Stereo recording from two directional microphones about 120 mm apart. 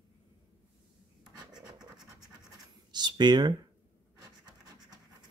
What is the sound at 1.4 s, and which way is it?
Scratch, 35° right (ahead or behind).